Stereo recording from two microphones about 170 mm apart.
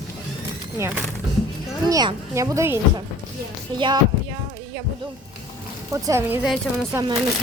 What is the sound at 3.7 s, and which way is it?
Speech, 30° right (ahead or behind).